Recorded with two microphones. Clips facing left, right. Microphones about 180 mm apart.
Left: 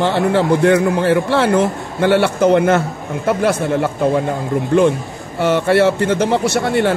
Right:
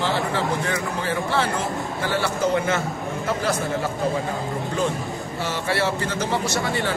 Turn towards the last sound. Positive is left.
turn(degrees=60)  # may be behind; listen again after turning